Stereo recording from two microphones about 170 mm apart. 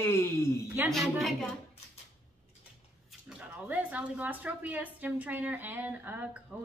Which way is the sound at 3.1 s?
5° right (ahead or behind).